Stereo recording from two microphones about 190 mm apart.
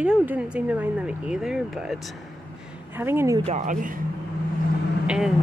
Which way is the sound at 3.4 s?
40° right (ahead or behind).